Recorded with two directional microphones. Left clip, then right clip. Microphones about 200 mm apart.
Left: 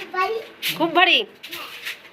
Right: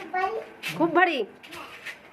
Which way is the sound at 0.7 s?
10° right (ahead or behind).